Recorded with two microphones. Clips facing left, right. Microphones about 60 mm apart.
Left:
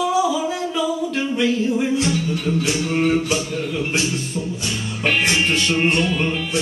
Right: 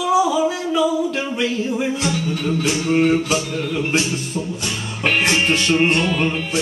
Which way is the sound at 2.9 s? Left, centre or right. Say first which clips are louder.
Right 3 dB; centre.